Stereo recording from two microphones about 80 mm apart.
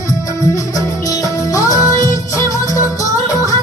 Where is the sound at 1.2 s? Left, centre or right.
Left.